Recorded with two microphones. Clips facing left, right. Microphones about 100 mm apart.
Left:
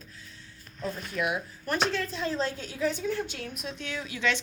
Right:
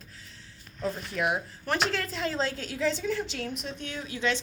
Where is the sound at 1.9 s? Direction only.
90° right.